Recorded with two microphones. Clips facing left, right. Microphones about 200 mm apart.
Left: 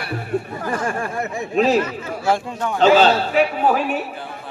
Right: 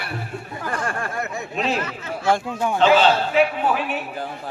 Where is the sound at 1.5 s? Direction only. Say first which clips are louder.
Left 8 dB; 40° left (ahead or behind).